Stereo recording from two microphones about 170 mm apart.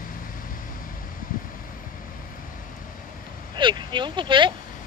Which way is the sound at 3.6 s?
25° right (ahead or behind).